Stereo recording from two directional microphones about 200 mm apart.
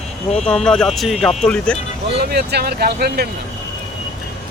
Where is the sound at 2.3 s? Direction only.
55° right (ahead or behind).